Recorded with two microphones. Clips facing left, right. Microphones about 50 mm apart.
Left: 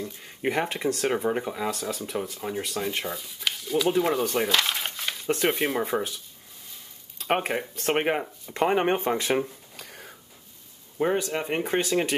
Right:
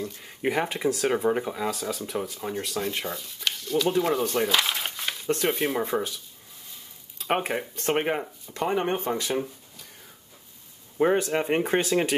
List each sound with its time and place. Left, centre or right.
0.0 s speech: centre
7.2 s speech: centre
7.9 s speech: centre
8.5 s speech: left
11.0 s speech: centre